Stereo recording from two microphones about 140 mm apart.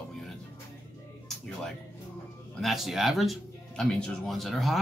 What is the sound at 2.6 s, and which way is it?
Speech, centre (ahead or behind).